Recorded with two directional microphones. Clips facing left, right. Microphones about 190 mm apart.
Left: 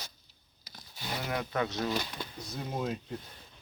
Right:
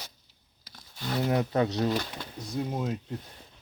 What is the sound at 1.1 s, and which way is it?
Speech, 30° right (ahead or behind).